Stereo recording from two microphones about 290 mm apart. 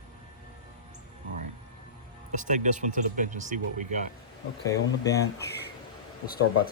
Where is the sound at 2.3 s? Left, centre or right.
Right.